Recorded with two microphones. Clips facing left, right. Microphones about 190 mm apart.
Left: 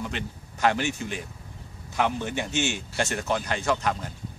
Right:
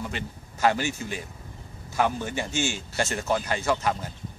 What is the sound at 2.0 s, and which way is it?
Speech, 5° right (ahead or behind).